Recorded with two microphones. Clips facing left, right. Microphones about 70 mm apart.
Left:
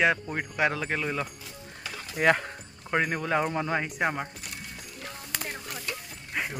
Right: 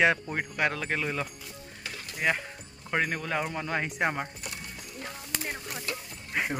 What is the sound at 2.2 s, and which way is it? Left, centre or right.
Speech, left.